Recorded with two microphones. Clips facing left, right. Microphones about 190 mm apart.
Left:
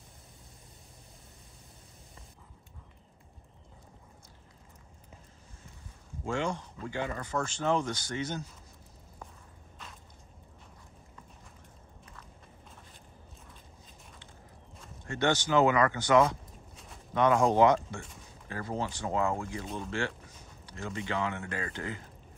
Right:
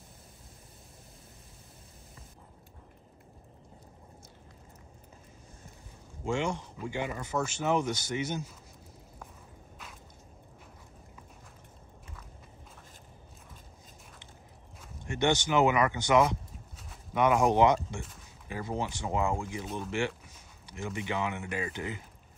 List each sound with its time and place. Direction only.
6.2 s speech: 20° right (ahead or behind); by 8.5 s 5° right (ahead or behind)
15.0 s speech: 20° right (ahead or behind)
16.7 s a sound: 10° right (ahead or behind)
18.5 s speech: 15° right (ahead or behind)